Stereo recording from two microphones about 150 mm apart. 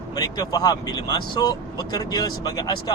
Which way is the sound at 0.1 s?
25° left (ahead or behind).